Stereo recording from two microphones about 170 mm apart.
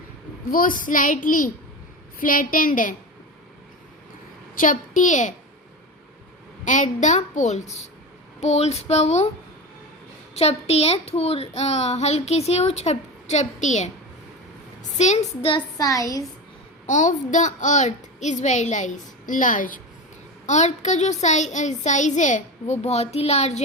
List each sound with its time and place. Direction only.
0.5 s speech: 55° left (ahead or behind)
4.5 s a woman's voice: 50° left (ahead or behind)
6.7 s speech: 45° left (ahead or behind)
10.3 s speech: 40° left (ahead or behind)
14.9 s speech: 45° left (ahead or behind); by 16.2 s 20° left (ahead or behind)
16.8 s speech: 45° left (ahead or behind)